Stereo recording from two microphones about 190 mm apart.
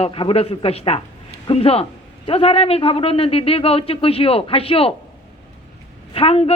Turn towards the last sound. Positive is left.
turn(degrees=30)  # may be behind; listen again after turning